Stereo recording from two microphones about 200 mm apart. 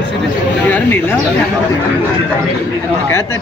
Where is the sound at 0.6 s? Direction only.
10° left (ahead or behind).